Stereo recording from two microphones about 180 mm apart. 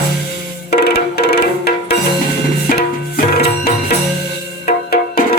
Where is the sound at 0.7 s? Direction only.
65° left (ahead or behind).